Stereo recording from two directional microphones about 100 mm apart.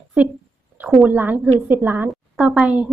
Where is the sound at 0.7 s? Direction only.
20° right (ahead or behind).